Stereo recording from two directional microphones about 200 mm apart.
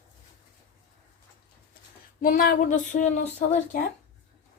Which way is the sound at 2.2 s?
45° left (ahead or behind).